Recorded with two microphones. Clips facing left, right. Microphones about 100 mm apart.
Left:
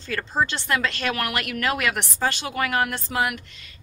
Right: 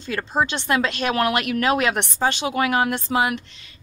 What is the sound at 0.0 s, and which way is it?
A woman's voice, 20° right (ahead or behind).